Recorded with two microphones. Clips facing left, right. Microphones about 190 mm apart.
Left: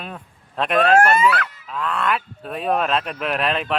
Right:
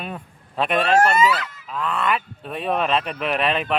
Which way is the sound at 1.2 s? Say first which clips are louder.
Even; 60° left (ahead or behind).